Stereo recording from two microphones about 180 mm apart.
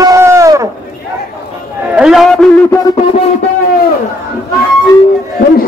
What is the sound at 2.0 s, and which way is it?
Speech, centre (ahead or behind).